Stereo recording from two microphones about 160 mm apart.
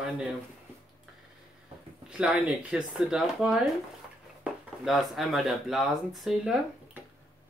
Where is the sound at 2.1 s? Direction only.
5° right (ahead or behind).